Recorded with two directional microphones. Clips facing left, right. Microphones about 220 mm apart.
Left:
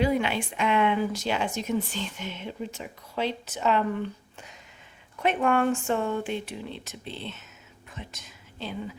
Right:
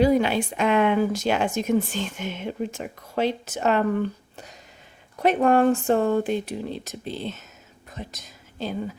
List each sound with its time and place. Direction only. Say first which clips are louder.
0.0 s speech: right 6 dB; 40° right (ahead or behind)
5.2 s speech: right 5 dB; 35° right (ahead or behind)